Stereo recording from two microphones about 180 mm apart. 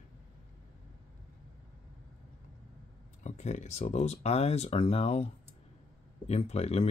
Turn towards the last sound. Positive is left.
turn(degrees=35)  # may be behind; listen again after turning